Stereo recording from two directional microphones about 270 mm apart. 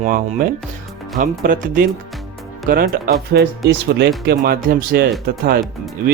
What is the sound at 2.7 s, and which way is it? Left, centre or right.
Speech, right.